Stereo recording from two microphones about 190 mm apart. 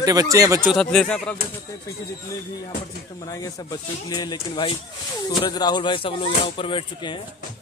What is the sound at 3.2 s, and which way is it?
Speech, 20° left (ahead or behind).